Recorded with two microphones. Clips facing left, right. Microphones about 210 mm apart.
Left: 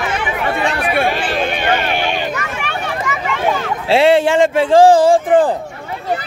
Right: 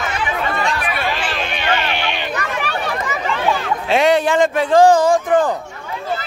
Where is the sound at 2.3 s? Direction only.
35° right (ahead or behind).